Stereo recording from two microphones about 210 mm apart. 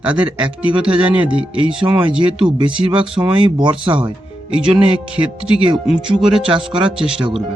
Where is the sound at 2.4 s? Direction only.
25° right (ahead or behind).